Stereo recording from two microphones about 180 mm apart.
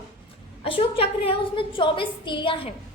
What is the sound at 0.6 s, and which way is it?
A woman's voice, 30° left (ahead or behind).